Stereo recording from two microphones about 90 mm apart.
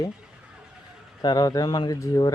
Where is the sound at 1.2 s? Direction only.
50° left (ahead or behind).